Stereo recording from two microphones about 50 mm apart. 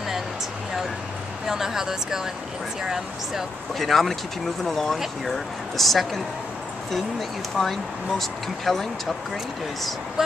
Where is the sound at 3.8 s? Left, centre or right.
Centre.